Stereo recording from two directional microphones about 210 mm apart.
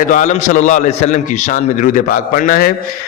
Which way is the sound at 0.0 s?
35° left (ahead or behind).